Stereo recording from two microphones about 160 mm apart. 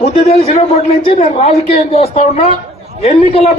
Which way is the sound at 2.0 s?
55° left (ahead or behind).